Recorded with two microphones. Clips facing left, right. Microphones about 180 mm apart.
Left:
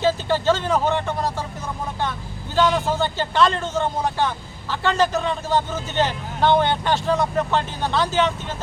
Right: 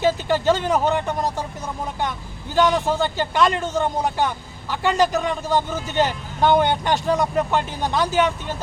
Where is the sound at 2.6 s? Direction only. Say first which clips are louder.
Right 1 dB; 15° right (ahead or behind).